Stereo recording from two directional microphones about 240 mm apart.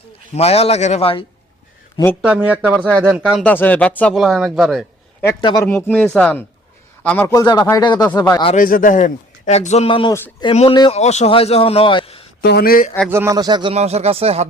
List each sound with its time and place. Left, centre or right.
0.3 s a man's voice: left
2.2 s speech: centre
3.4 s speech: centre
5.2 s speech: centre
5.6 s speech: centre
8.5 s a man's voice: left
12.4 s speech: left
13.1 s speech: centre